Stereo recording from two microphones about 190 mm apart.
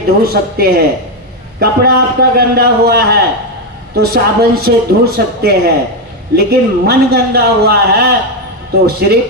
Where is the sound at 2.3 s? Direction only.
55° right (ahead or behind).